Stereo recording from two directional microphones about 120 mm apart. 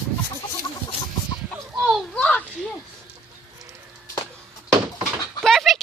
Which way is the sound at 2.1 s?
10° left (ahead or behind).